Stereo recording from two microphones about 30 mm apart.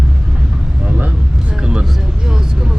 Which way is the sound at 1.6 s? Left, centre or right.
Right.